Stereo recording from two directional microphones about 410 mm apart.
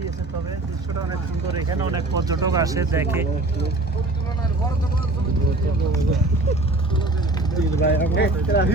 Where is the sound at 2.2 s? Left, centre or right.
Centre.